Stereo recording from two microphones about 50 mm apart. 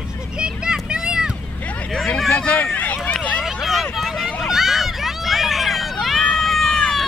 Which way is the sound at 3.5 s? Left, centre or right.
Centre.